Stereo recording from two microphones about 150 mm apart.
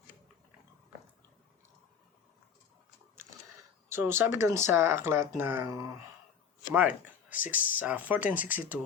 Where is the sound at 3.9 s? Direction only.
15° right (ahead or behind).